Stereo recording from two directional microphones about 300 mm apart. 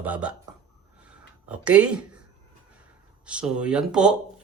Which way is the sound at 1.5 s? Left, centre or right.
Centre.